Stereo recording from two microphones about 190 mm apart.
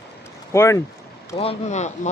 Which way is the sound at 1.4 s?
35° left (ahead or behind).